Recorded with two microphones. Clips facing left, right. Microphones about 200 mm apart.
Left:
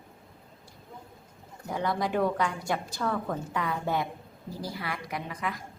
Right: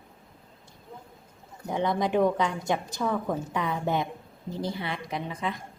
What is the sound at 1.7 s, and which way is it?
A woman's voice, 20° right (ahead or behind).